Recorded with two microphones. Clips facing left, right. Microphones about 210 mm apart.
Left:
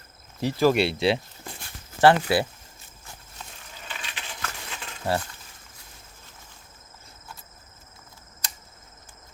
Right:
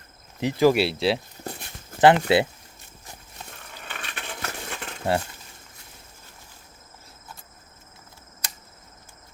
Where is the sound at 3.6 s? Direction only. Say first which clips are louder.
Right 1 dB; 60° right (ahead or behind).